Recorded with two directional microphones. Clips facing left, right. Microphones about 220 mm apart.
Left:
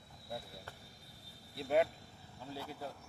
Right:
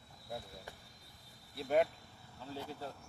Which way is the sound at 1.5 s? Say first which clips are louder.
Even; centre (ahead or behind).